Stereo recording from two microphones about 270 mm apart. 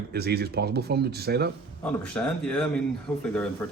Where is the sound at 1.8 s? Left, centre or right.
Centre.